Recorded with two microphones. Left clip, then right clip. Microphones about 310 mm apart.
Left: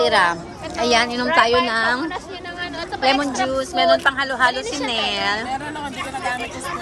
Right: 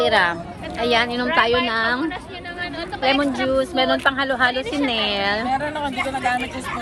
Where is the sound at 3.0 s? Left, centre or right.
Centre.